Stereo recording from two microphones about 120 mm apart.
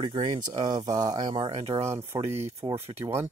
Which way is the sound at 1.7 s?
25° right (ahead or behind).